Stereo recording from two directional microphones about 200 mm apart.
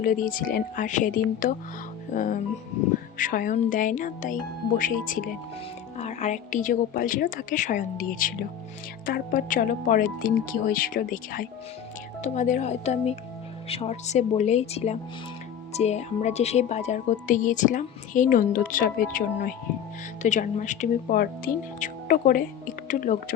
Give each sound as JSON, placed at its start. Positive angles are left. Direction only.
{"t": 0.0, "sound": "speech", "side_deg": 40}